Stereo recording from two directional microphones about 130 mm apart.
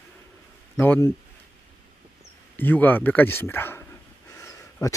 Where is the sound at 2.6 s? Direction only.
15° left (ahead or behind).